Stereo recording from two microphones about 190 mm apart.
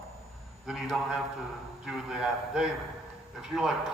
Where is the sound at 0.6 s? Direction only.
5° right (ahead or behind).